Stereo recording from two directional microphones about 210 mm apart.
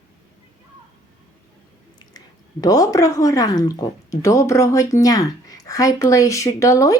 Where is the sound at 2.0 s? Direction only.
20° left (ahead or behind).